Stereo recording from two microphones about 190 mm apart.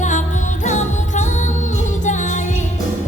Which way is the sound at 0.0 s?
40° left (ahead or behind).